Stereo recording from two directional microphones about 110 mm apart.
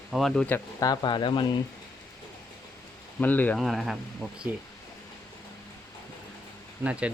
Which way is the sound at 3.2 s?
15° left (ahead or behind).